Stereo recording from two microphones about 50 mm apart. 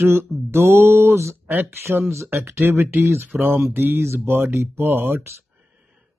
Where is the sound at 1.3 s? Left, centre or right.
Right.